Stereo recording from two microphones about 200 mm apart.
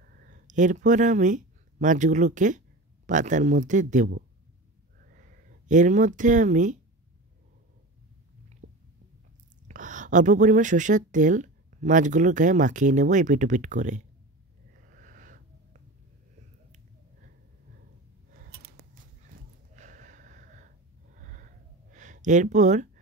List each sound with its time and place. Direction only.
0.0 s speech: 45° right (ahead or behind)
9.7 s speech: 40° right (ahead or behind)
14.7 s wheeze: 45° right (ahead or behind)
18.3 s scissors: 50° right (ahead or behind)
19.7 s a sound: 40° right (ahead or behind)
21.9 s speech: 40° right (ahead or behind)